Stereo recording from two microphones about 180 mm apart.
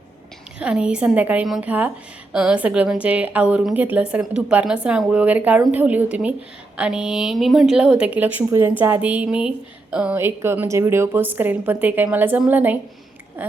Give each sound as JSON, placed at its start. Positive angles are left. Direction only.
{"t": 0.6, "sound": "a woman's voice", "side_deg": -5}